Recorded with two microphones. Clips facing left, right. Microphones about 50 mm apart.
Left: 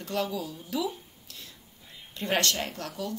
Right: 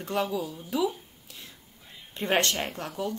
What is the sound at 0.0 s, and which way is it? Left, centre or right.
Speech, right.